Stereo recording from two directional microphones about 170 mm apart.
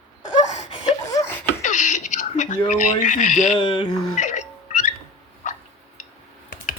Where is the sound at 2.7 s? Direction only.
45° left (ahead or behind).